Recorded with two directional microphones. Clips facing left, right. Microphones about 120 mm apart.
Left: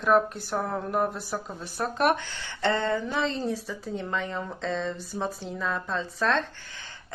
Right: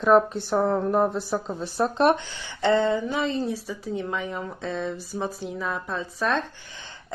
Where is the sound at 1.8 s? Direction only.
25° right (ahead or behind).